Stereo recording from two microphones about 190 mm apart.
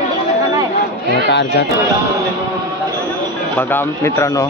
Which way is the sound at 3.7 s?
15° left (ahead or behind).